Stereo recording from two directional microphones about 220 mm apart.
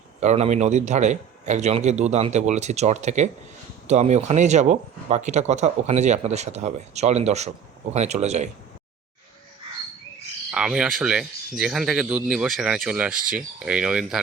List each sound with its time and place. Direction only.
0.2 s speech: 30° right (ahead or behind)
10.5 s speech: 5° right (ahead or behind)